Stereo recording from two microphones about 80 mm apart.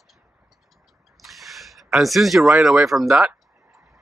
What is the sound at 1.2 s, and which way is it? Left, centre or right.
Speech, centre.